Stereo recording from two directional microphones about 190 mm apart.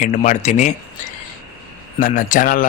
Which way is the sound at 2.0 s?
45° left (ahead or behind).